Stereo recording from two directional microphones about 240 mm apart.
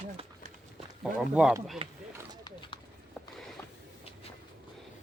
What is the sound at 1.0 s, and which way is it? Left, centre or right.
Speech, centre.